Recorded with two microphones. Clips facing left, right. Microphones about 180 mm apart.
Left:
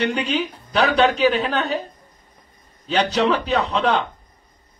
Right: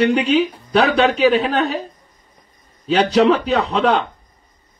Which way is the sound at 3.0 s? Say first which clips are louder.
Right 5 dB; 35° right (ahead or behind).